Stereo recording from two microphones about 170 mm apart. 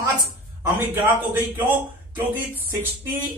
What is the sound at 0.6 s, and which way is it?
Speech, 15° right (ahead or behind).